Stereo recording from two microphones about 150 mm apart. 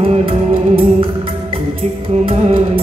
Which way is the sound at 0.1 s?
40° right (ahead or behind).